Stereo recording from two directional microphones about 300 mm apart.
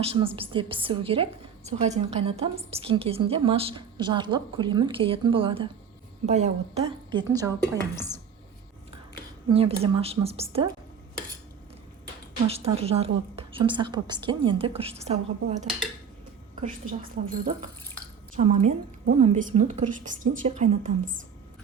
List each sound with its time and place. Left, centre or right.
0.0 s a woman's voice: centre
7.6 s speech: centre
9.5 s a woman's voice: centre
12.5 s a woman's voice: centre
17.2 s a woman's voice: right